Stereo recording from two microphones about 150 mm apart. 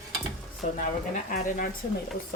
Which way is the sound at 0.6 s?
55° left (ahead or behind).